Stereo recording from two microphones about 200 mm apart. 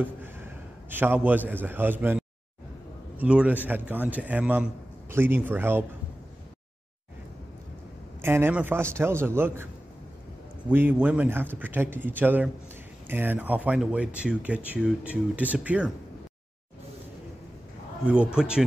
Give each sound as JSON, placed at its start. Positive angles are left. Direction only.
{"t": 0.0, "sound": "a man's voice", "side_deg": -10}
{"t": 8.2, "sound": "speech", "side_deg": -10}
{"t": 10.7, "sound": "speech", "side_deg": -10}
{"t": 18.0, "sound": "speech", "side_deg": -5}